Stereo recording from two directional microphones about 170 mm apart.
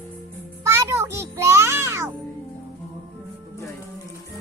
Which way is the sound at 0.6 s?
15° right (ahead or behind).